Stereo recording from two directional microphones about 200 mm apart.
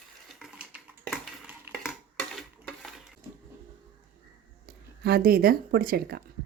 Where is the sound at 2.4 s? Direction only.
Centre (ahead or behind).